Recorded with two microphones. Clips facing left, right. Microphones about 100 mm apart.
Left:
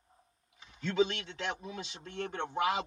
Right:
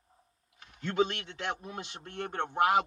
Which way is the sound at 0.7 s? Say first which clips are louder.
Right 1 dB; 55° right (ahead or behind).